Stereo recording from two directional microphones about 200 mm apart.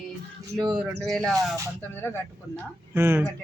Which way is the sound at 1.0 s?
5° left (ahead or behind).